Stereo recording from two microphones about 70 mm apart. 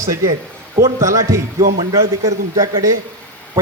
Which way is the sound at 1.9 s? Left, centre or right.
Right.